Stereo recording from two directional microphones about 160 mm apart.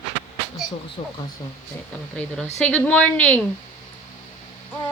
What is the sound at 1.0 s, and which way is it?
Speech, 40° left (ahead or behind).